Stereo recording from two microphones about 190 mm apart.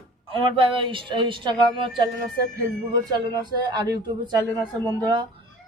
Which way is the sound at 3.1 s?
20° right (ahead or behind).